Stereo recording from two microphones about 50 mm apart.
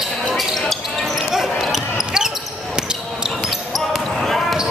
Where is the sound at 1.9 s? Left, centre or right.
Centre.